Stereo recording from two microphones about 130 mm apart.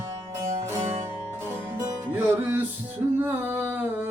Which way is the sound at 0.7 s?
20° right (ahead or behind).